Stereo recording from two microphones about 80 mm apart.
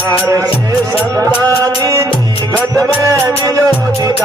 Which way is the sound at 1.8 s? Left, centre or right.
Right.